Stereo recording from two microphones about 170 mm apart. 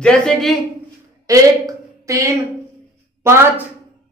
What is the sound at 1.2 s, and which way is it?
A woman's voice, 20° right (ahead or behind).